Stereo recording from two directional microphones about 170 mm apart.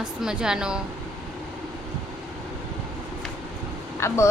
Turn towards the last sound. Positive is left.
turn(degrees=15)  # may be behind; listen again after turning